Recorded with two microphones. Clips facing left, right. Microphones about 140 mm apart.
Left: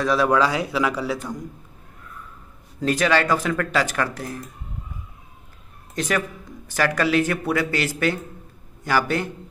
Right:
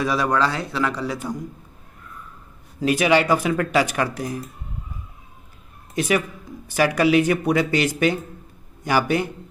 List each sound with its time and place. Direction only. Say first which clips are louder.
0.0 s a man's voice: left 2 dB; centre (ahead or behind)
2.8 s speech: right 2 dB; 10° right (ahead or behind)
5.9 s speech: right 3 dB; 10° right (ahead or behind)